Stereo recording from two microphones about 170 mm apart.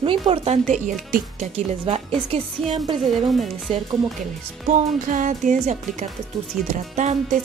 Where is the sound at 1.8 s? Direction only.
35° right (ahead or behind).